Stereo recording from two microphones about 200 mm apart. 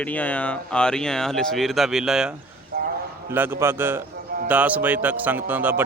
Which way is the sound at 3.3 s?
10° right (ahead or behind).